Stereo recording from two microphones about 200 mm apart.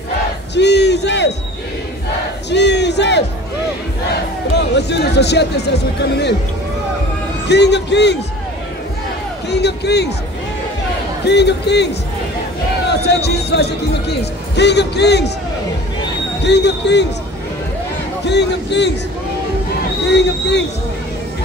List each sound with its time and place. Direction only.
0.6 s crowd: 60° left (ahead or behind)
2.5 s battle cry: 60° left (ahead or behind)
4.6 s speech: 60° left (ahead or behind)
7.4 s speech: 60° left (ahead or behind)
9.5 s speech: 55° left (ahead or behind)
11.2 s speech: 60° left (ahead or behind)
16.4 s speech: 60° left (ahead or behind)
18.2 s speech: 60° left (ahead or behind)
20.1 s speech: 60° left (ahead or behind)